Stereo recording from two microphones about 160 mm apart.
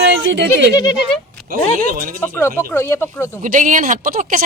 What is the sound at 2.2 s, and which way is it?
Speech, 15° left (ahead or behind).